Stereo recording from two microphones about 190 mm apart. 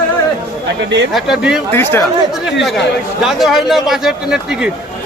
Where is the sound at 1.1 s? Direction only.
5° right (ahead or behind).